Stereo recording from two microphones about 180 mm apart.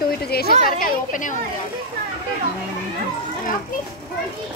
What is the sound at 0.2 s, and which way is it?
Speech, 60° left (ahead or behind).